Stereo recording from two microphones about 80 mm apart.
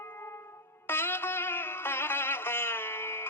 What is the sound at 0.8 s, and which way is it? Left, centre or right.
Music, left.